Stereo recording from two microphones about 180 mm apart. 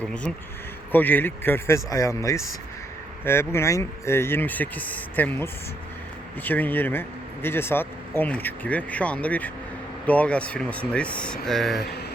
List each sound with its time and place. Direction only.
0.0 s speech: 5° left (ahead or behind)
11.8 s mantra: 65° left (ahead or behind)